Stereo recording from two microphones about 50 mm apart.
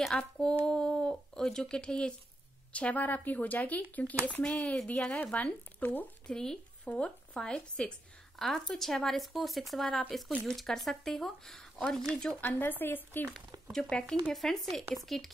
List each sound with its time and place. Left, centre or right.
0.1 s speech: centre
2.7 s speech: left
6.2 s speech: centre
6.8 s speech: left
8.4 s speech: centre
12.4 s speech: left
13.3 s speech: centre
14.3 s speech: centre